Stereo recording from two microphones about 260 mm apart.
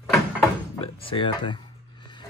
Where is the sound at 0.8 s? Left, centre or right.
Centre.